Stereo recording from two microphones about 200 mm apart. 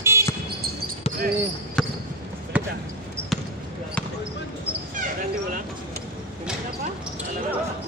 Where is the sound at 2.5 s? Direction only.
5° right (ahead or behind).